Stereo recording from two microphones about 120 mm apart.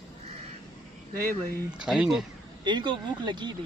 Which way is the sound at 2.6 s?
40° right (ahead or behind).